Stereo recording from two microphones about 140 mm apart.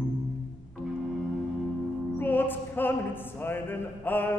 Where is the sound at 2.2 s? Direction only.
15° left (ahead or behind).